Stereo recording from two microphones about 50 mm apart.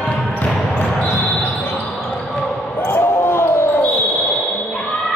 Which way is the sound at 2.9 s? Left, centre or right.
Left.